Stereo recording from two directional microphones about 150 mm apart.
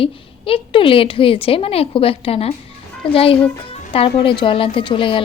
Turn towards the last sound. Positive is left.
turn(degrees=35)  # may be behind; listen again after turning